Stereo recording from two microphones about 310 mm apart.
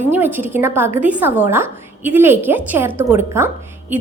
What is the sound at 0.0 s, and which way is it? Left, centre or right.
A woman's voice, centre.